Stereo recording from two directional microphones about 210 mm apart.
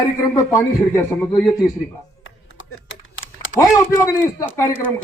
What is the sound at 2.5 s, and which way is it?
Typing, 65° left (ahead or behind).